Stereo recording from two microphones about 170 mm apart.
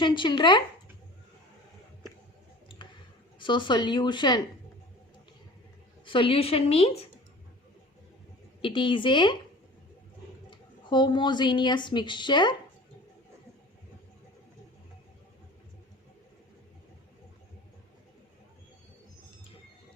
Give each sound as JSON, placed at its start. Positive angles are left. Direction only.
{"t": 0.0, "sound": "speech", "side_deg": 30}
{"t": 3.3, "sound": "speech", "side_deg": 30}
{"t": 6.1, "sound": "a woman's voice", "side_deg": 30}
{"t": 8.6, "sound": "speech", "side_deg": 30}
{"t": 10.5, "sound": "a woman's voice", "side_deg": 25}